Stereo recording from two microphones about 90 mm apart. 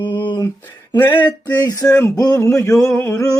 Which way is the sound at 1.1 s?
20° left (ahead or behind).